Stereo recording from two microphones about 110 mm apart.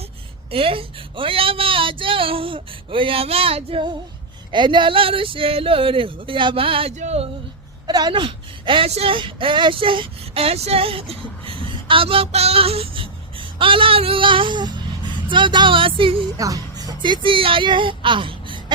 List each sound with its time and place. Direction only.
0.5 s speech: 55° right (ahead or behind)
4.5 s speech: 45° right (ahead or behind)
6.9 s a sound: 85° right
7.9 s a woman's voice: 40° right (ahead or behind)
9.0 s female singing: 50° right (ahead or behind)
16.4 s speech: 35° right (ahead or behind); by 18.6 s 50° right (ahead or behind)